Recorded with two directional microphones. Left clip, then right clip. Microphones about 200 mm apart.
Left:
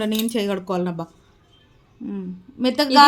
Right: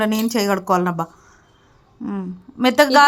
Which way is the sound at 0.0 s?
15° right (ahead or behind).